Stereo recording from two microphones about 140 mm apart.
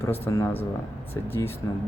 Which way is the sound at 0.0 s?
20° left (ahead or behind).